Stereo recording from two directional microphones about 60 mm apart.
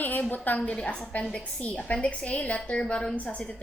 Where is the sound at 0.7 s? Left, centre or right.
Centre.